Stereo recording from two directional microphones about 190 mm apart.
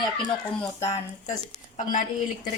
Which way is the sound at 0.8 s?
35° left (ahead or behind).